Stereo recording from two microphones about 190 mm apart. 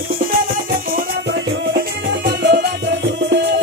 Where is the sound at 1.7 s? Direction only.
60° right (ahead or behind).